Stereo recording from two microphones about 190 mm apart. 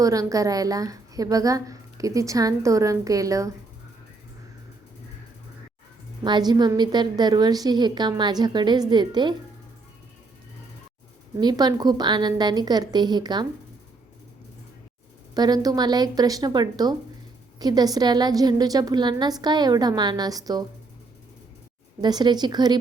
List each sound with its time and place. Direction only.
0.0 s a woman's voice: 15° right (ahead or behind)
6.2 s a woman's voice: 25° right (ahead or behind)
11.3 s a woman's voice: 20° right (ahead or behind)
15.4 s a woman's voice: 20° right (ahead or behind)
22.0 s a woman's voice: 20° right (ahead or behind)